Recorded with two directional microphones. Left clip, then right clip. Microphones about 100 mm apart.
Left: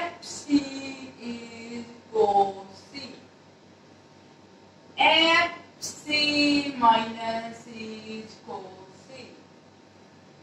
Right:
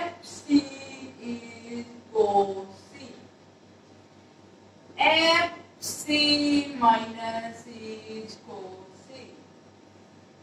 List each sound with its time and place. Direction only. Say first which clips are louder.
0.0 s music: left 1 dB; 25° left (ahead or behind)
4.9 s child singing: left 1 dB; 20° left (ahead or behind)